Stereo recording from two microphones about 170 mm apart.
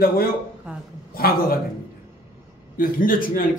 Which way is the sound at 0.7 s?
5° right (ahead or behind).